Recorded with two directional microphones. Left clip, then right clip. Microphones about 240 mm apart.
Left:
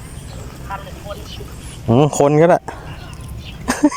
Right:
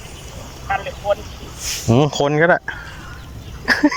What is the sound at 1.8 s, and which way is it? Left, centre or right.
Speech, centre.